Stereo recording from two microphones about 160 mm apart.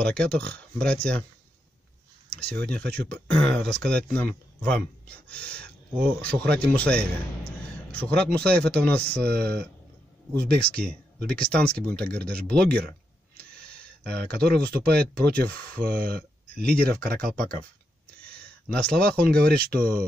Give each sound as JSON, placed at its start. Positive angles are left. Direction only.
{"t": 0.0, "sound": "speech", "side_deg": 5}
{"t": 2.7, "sound": "speech", "side_deg": 10}
{"t": 9.2, "sound": "speech", "side_deg": -90}
{"t": 11.3, "sound": "speech", "side_deg": 5}
{"t": 14.1, "sound": "speech", "side_deg": 5}
{"t": 14.5, "sound": "speech", "side_deg": -80}
{"t": 18.4, "sound": "speech", "side_deg": 5}
{"t": 19.6, "sound": "speech", "side_deg": -65}